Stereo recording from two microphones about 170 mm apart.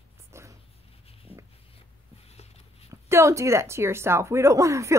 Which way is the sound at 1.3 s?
10° left (ahead or behind).